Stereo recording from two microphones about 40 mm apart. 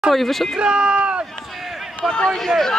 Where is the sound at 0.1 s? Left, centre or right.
Centre.